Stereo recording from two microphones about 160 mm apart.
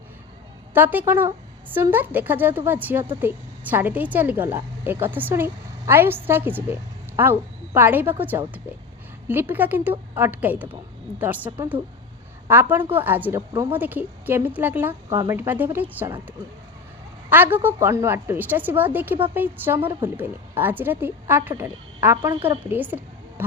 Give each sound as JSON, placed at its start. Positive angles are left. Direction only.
{"t": 0.7, "sound": "a woman's voice", "side_deg": -10}
{"t": 13.5, "sound": "speech", "side_deg": -25}
{"t": 13.7, "sound": "a woman's voice", "side_deg": -10}
{"t": 17.2, "sound": "a woman's voice", "side_deg": -10}